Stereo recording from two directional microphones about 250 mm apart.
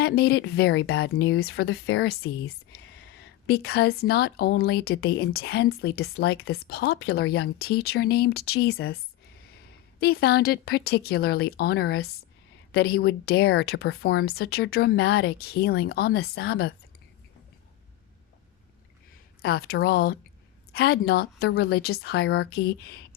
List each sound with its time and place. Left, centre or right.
0.0 s speech: left
10.0 s speech: left
19.4 s speech: left